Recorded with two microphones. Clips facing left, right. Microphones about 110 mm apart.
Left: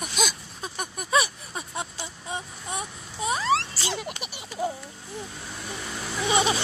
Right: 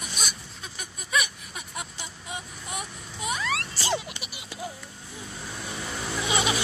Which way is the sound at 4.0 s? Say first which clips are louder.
Left 6 dB; 45° left (ahead or behind).